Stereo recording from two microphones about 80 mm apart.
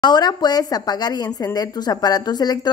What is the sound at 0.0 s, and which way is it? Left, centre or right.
A woman's voice, left.